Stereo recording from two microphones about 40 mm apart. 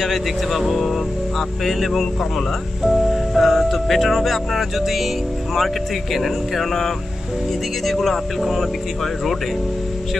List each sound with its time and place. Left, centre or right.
0.0 s speech: centre
2.8 s music: centre
6.1 s speech: centre